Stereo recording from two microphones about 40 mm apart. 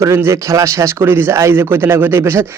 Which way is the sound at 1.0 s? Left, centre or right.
Right.